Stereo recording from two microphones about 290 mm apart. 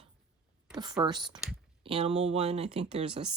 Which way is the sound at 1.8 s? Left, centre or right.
Centre.